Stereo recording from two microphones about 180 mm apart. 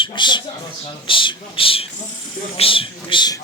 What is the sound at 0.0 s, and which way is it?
Speech, 25° left (ahead or behind).